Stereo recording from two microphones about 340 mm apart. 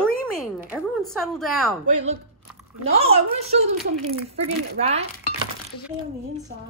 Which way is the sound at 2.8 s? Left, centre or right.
Centre.